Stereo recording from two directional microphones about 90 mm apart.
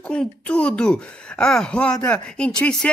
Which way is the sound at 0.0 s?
10° left (ahead or behind).